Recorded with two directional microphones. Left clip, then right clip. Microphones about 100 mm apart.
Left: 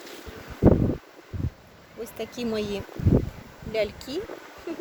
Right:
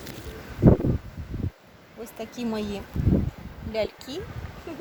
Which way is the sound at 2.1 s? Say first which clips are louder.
Left 2 dB; 65° left (ahead or behind).